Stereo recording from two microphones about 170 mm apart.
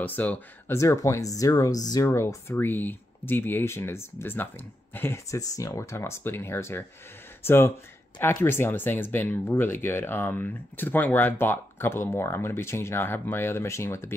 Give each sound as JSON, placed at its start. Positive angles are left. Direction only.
{"t": 0.0, "sound": "speech", "side_deg": 10}